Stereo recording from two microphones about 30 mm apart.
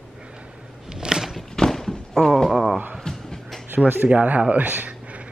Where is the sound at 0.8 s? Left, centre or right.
Right.